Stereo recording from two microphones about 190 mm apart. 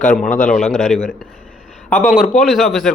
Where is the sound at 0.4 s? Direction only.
Centre (ahead or behind).